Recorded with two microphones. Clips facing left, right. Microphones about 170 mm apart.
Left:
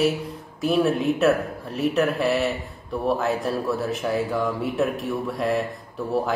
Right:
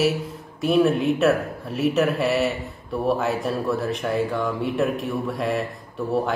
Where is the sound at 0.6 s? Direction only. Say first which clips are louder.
Right 2 dB; centre (ahead or behind).